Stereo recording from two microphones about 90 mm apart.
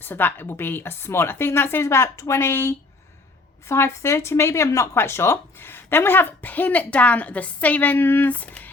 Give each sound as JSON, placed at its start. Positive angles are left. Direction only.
{"t": 0.0, "sound": "speech", "side_deg": 20}